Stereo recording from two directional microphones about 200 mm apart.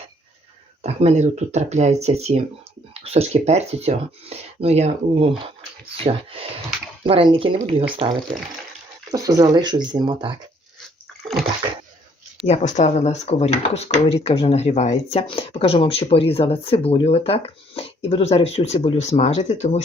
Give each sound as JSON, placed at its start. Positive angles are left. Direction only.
{"t": 0.8, "sound": "speech", "side_deg": -35}
{"t": 9.1, "sound": "speech", "side_deg": -20}
{"t": 12.5, "sound": "speech", "side_deg": 35}